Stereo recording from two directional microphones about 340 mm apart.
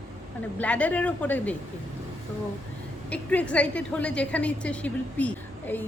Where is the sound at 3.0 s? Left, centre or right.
Centre.